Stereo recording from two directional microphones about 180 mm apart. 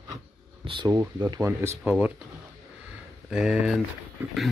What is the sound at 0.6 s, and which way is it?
Speech, 25° right (ahead or behind).